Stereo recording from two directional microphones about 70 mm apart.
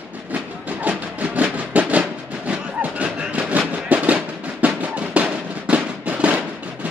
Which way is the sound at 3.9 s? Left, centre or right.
Right.